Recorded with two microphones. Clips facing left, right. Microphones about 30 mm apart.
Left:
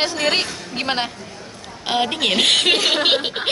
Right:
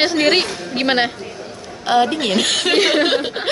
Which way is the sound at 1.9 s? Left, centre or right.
Centre.